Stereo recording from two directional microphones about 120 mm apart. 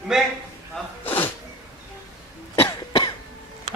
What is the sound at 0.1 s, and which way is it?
Speech, 5° right (ahead or behind).